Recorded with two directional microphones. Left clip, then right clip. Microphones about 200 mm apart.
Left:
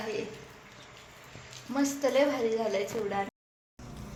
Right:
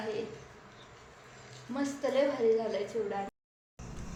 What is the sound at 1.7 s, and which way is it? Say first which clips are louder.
A woman's voice: left 4 dB; 30° left (ahead or behind).